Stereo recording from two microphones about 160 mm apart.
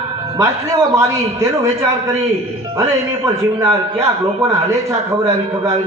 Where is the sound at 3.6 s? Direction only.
20° right (ahead or behind).